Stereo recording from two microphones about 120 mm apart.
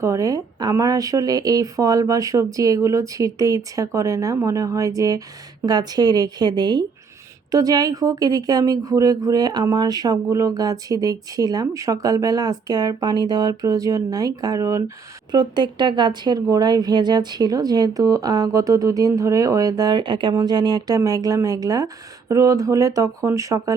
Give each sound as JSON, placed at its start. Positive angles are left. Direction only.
{"t": 0.0, "sound": "speech", "side_deg": -25}
{"t": 15.3, "sound": "speech", "side_deg": -40}